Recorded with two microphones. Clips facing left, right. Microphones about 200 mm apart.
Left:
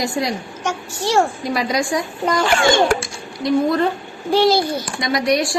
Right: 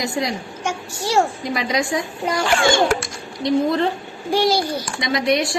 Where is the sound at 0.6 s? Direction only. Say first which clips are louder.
Left 2 dB; 10° right (ahead or behind).